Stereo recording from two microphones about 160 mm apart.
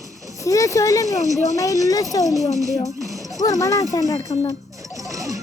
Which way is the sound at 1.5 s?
20° left (ahead or behind).